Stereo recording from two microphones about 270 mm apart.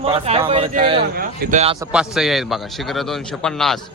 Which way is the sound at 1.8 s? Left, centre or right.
Centre.